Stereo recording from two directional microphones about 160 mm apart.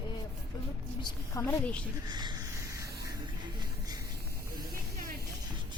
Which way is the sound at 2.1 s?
25° right (ahead or behind).